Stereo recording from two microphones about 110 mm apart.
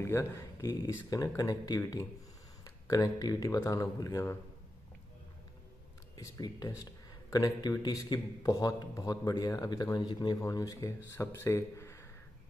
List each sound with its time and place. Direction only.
0.0 s speech: 25° left (ahead or behind)
6.1 s speech: 35° left (ahead or behind)
10.4 s speech: 30° left (ahead or behind)